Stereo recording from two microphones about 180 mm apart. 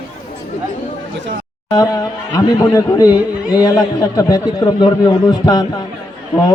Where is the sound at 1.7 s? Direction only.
20° left (ahead or behind).